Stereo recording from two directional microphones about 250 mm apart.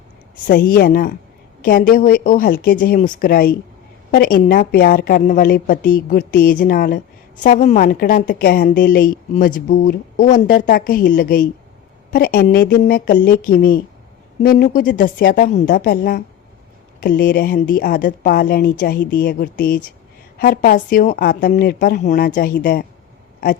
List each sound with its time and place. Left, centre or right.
0.4 s a woman's voice: left